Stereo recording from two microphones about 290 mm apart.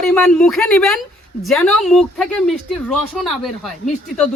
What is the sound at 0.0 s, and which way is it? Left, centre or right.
Speech, centre.